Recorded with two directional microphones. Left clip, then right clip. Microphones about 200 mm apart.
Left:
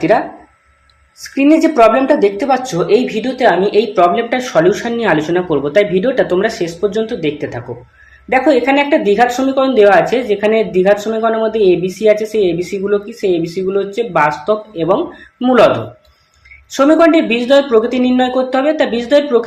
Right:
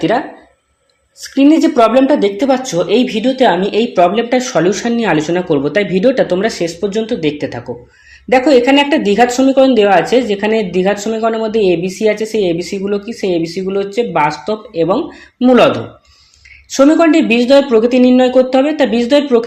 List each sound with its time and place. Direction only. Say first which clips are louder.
1.2 s speech: right 1 dB; 30° right (ahead or behind)
16.7 s speech: even; 35° right (ahead or behind)